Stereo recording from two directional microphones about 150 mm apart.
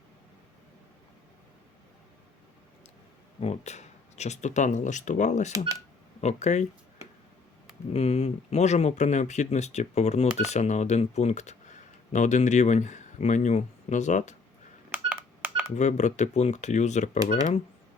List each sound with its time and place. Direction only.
3.4 s speech: 50° left (ahead or behind)
14.9 s telephone dialing: 10° right (ahead or behind)
15.7 s speech: 50° left (ahead or behind)